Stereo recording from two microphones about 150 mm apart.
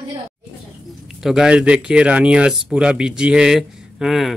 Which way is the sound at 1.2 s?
5° right (ahead or behind).